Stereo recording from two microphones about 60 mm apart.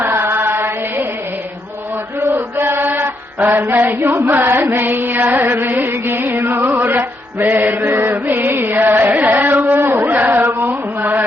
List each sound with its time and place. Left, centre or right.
0.0 s mantra: right
2.2 s chant: right
3.7 s mantra: right
4.3 s music: right